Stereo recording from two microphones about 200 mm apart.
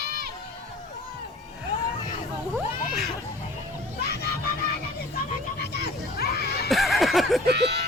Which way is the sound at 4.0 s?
55° left (ahead or behind).